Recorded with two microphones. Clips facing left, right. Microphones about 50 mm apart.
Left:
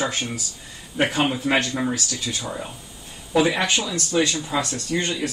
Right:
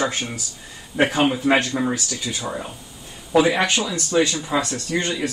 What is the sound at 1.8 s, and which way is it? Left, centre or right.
Speech, right.